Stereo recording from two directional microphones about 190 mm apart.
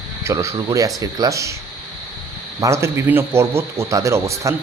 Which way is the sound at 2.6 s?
15° right (ahead or behind).